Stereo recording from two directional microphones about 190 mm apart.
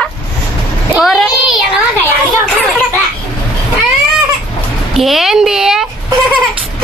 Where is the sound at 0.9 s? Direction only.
Centre (ahead or behind).